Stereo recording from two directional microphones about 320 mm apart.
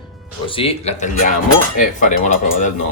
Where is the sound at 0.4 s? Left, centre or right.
Centre.